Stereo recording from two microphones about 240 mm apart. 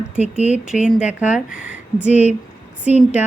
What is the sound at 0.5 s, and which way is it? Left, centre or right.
Speech, centre.